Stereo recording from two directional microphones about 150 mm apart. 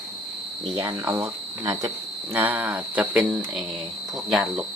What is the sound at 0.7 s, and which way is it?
Speech, 20° right (ahead or behind).